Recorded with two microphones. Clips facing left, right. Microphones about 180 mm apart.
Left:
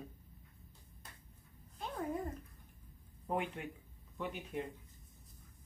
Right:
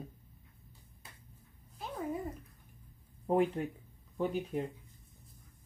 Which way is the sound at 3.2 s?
35° right (ahead or behind).